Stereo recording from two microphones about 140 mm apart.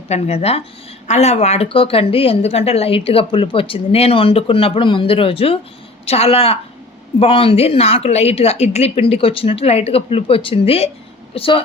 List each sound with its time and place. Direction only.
0.1 s a woman's voice: 50° left (ahead or behind)